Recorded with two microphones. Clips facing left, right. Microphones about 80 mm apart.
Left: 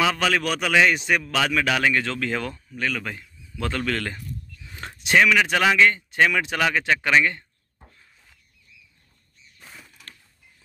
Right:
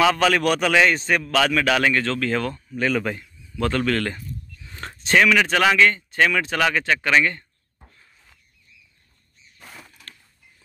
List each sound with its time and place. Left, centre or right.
0.0 s speech: centre
2.7 s speech: right
3.2 s speech: centre
9.6 s a sound: right